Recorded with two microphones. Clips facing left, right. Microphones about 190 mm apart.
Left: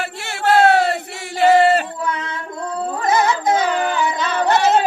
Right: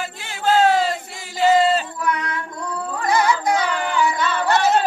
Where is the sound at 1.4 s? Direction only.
70° left (ahead or behind).